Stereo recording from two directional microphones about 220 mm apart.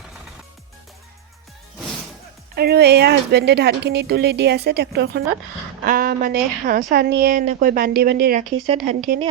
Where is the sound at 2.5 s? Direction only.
45° right (ahead or behind).